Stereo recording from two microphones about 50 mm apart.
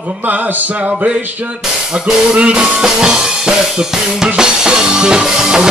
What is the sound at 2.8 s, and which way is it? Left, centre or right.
Music, centre.